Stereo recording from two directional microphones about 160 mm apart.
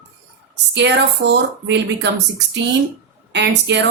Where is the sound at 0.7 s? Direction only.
90° right.